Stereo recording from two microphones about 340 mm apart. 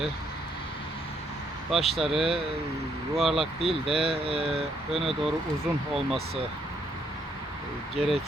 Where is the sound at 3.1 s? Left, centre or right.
Centre.